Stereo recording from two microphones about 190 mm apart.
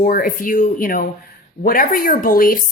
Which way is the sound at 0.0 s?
45° left (ahead or behind).